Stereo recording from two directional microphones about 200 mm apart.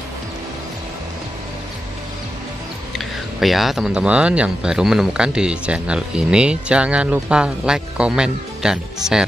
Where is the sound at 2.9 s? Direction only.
Centre (ahead or behind).